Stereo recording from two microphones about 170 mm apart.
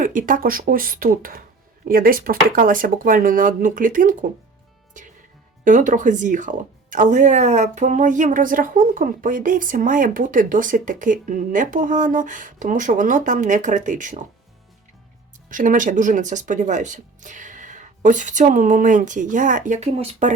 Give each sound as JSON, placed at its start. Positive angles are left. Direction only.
{"t": 0.0, "sound": "speech", "side_deg": -50}
{"t": 4.9, "sound": "music", "side_deg": -50}
{"t": 5.6, "sound": "speech", "side_deg": -50}
{"t": 15.4, "sound": "speech", "side_deg": -50}